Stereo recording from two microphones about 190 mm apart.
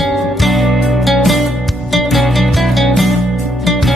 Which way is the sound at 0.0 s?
Centre (ahead or behind).